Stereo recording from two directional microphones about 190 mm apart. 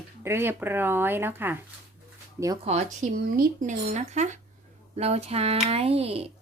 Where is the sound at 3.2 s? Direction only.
50° right (ahead or behind).